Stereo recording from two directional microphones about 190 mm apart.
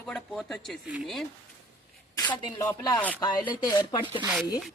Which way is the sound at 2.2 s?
15° left (ahead or behind).